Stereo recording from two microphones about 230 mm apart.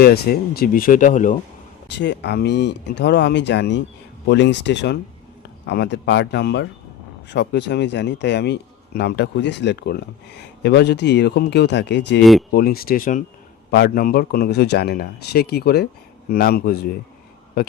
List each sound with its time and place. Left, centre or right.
0.0 s speech: left
1.9 s speech: left
12.2 s speech: centre
12.5 s speech: left